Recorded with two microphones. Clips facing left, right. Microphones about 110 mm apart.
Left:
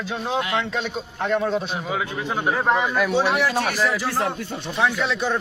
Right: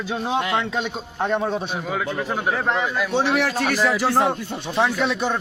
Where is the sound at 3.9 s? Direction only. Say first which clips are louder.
Right 5 dB; 75° right (ahead or behind).